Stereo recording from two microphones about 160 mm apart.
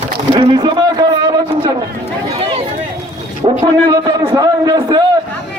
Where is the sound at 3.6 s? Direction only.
20° right (ahead or behind).